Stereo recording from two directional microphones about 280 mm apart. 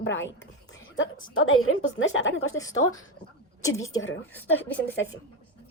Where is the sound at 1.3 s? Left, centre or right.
Left.